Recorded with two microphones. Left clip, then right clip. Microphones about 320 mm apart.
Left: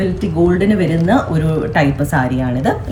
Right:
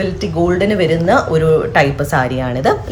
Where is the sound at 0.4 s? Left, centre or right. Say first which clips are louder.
Right 2 dB; right.